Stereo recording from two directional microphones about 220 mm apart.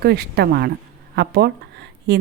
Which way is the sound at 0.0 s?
45° right (ahead or behind).